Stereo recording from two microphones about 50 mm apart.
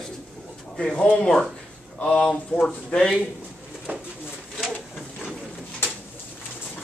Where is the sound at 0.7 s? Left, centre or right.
Left.